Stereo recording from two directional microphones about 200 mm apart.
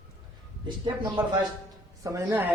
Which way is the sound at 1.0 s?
25° right (ahead or behind).